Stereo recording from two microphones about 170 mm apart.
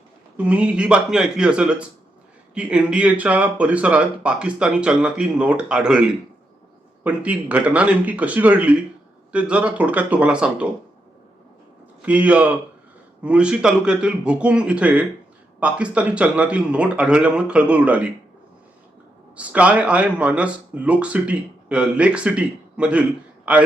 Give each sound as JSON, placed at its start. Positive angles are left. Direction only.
{"t": 0.3, "sound": "speech", "side_deg": -10}
{"t": 12.0, "sound": "speech", "side_deg": -10}
{"t": 19.4, "sound": "speech", "side_deg": -10}